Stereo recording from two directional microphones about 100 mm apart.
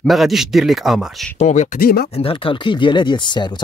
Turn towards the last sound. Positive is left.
turn(degrees=50)  # may be behind; listen again after turning